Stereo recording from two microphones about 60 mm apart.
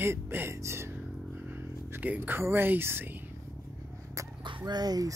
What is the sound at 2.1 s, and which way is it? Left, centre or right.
Speech, right.